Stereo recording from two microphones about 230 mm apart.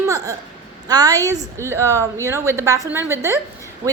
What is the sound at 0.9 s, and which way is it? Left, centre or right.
A woman's voice, centre.